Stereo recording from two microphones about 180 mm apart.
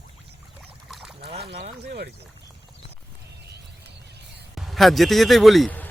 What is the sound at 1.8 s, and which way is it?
Speech, 65° right (ahead or behind).